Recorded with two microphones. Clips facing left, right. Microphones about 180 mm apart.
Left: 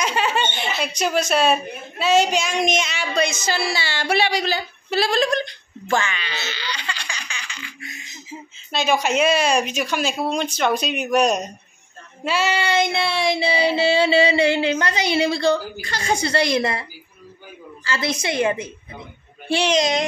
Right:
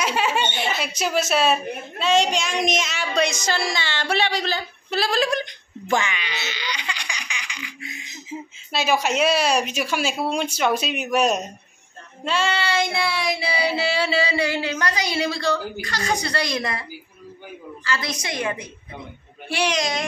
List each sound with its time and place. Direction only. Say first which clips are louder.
0.0 s speech: left 1 dB; 5° right (ahead or behind)
5.4 s baby laughter: left 2 dB; 15° right (ahead or behind)
8.7 s speech: left 2 dB; 5° right (ahead or behind)
12.3 s child singing: left 2 dB; 5° left (ahead or behind)
12.6 s child singing: left 3 dB; 20° left (ahead or behind)
17.8 s child singing: left 4 dB; 25° left (ahead or behind)